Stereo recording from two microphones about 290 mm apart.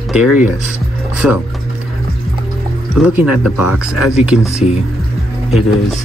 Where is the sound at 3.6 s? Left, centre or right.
Left.